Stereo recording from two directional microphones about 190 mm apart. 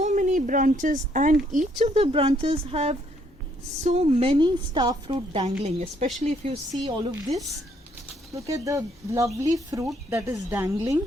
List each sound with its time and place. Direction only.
0.0 s a woman's voice: 40° right (ahead or behind); by 5.5 s 25° right (ahead or behind)
5.6 s speech: 35° right (ahead or behind)
8.4 s speech: 15° right (ahead or behind)